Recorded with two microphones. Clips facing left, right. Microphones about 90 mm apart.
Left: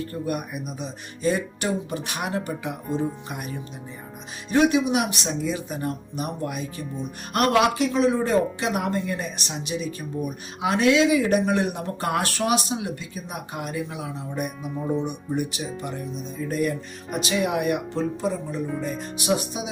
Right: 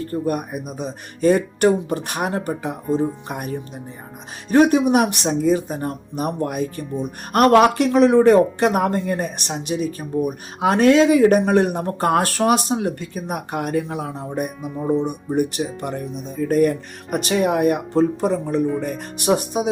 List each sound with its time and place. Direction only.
0.1 s speech: 40° right (ahead or behind)
15.8 s speech: 55° right (ahead or behind)
18.3 s speech: 65° right (ahead or behind)